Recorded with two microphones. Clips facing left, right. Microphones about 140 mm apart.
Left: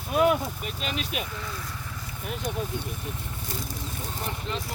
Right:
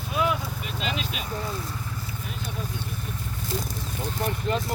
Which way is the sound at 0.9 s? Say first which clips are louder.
Left 1 dB; 55° left (ahead or behind).